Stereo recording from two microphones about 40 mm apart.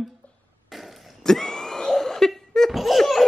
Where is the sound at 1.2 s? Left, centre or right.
Centre.